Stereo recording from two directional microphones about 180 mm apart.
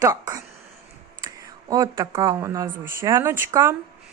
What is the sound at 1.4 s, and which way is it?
Speech, 20° right (ahead or behind).